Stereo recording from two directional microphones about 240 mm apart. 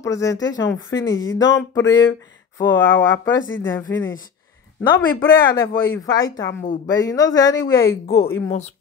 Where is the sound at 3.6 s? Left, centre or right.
Centre.